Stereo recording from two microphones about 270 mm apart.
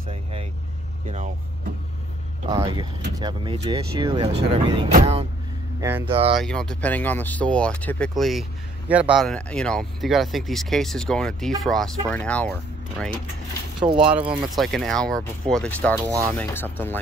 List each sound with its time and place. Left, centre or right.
0.1 s speech: right
2.4 s speech: centre
5.8 s speech: centre
6.3 s speech: centre
13.8 s speech: centre
14.5 s speech: centre